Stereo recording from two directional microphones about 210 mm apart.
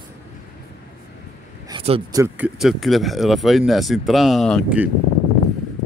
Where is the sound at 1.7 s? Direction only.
25° right (ahead or behind).